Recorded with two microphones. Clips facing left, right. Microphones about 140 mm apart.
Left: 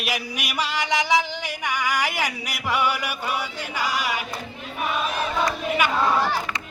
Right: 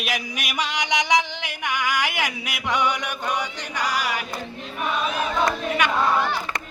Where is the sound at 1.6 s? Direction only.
10° left (ahead or behind).